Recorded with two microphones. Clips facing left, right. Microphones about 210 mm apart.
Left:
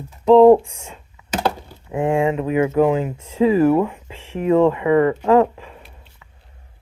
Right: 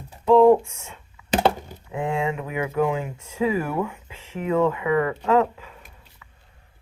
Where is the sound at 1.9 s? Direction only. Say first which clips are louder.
Left 7 dB; 50° left (ahead or behind).